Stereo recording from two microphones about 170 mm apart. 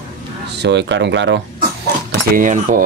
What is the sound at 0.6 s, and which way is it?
Speech, 90° right.